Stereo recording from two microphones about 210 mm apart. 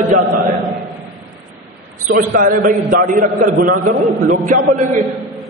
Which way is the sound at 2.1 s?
45° right (ahead or behind).